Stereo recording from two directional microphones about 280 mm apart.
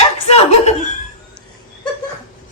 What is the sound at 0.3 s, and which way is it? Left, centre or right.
Chuckle, left.